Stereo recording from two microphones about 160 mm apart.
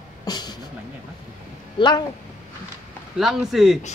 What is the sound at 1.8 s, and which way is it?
Speech, 30° left (ahead or behind).